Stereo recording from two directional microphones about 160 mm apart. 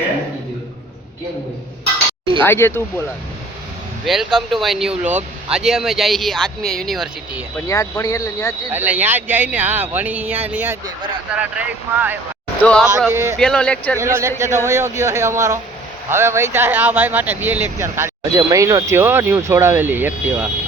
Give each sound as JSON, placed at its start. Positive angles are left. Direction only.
{"t": 2.4, "sound": "speech", "side_deg": 15}
{"t": 4.0, "sound": "speech", "side_deg": 0}
{"t": 7.7, "sound": "speech", "side_deg": 20}
{"t": 8.7, "sound": "speech", "side_deg": -10}
{"t": 12.6, "sound": "speech", "side_deg": 5}
{"t": 13.1, "sound": "speech", "side_deg": -15}
{"t": 13.4, "sound": "speech", "side_deg": 5}
{"t": 14.0, "sound": "speech", "side_deg": -15}